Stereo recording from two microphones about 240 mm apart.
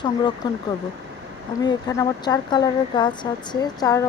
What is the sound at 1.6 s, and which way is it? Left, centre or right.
Speech, centre.